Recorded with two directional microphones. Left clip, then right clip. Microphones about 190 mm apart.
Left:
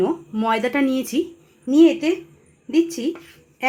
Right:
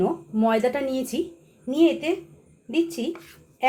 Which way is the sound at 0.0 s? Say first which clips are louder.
Left 2 dB; 60° left (ahead or behind).